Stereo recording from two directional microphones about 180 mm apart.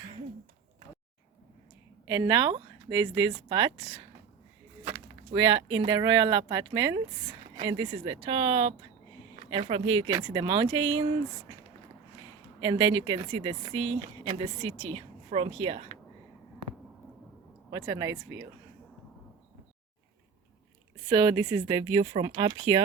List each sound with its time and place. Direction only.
2.0 s a woman's voice: 20° right (ahead or behind)
4.9 s a sound: 25° right (ahead or behind)
5.8 s a woman's voice: 25° right (ahead or behind)
12.5 s speech: 25° right (ahead or behind)
17.7 s speech: 20° right (ahead or behind)
21.1 s a woman's voice: 20° right (ahead or behind)